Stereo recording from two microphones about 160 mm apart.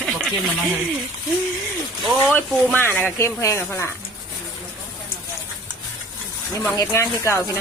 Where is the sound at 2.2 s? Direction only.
15° left (ahead or behind).